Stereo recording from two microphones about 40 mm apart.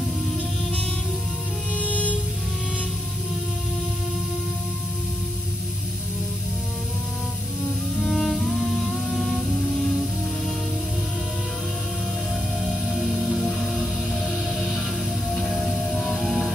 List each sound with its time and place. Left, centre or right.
7.9 s music: centre
12.9 s music: centre
15.8 s music: centre
16.3 s music: centre